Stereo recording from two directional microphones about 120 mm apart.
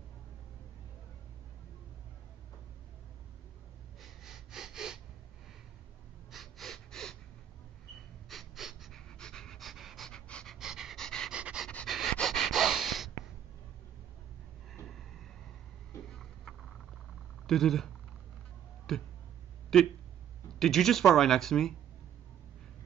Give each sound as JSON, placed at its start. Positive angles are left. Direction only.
{"t": 4.0, "sound": "snort", "side_deg": -5}
{"t": 6.3, "sound": "gasp", "side_deg": 0}
{"t": 8.3, "sound": "pant", "side_deg": 0}
{"t": 11.3, "sound": "dog", "side_deg": -10}
{"t": 11.6, "sound": "pant", "side_deg": 5}
{"t": 14.9, "sound": "vehicle", "side_deg": 0}
{"t": 16.1, "sound": "a sound", "side_deg": 0}
{"t": 17.5, "sound": "speech", "side_deg": 5}